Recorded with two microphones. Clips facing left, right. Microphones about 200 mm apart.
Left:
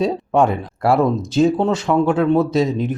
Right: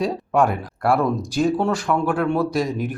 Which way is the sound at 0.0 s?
25° left (ahead or behind).